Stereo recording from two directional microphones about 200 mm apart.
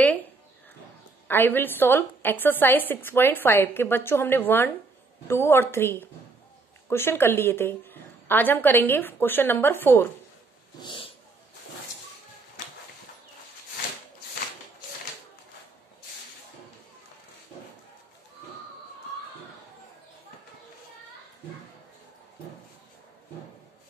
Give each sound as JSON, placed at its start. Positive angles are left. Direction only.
{"t": 1.2, "sound": "a woman's voice", "side_deg": 10}
{"t": 10.8, "sound": "cat", "side_deg": 25}